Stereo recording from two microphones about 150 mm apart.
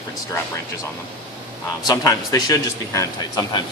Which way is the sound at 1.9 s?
25° left (ahead or behind).